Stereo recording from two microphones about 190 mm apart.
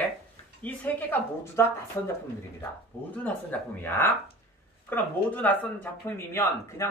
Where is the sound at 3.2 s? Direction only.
10° left (ahead or behind).